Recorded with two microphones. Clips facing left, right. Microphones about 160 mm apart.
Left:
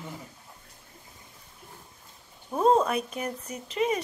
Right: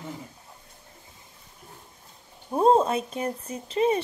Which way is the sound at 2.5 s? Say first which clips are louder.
Right 2 dB; 30° right (ahead or behind).